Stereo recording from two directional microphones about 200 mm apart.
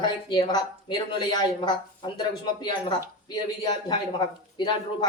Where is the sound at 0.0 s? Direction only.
25° left (ahead or behind).